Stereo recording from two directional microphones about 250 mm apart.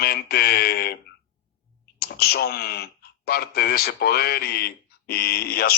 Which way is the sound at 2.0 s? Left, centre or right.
Left.